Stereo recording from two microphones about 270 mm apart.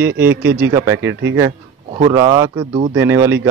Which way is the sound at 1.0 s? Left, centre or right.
Right.